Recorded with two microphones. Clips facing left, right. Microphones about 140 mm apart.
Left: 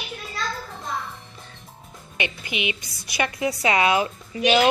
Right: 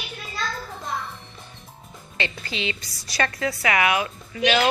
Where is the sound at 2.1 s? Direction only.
15° left (ahead or behind).